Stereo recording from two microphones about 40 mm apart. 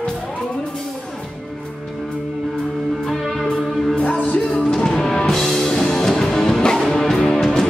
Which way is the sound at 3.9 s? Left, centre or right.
Left.